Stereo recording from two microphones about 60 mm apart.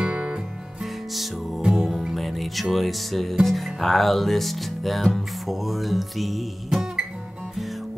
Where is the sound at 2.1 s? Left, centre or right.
Centre.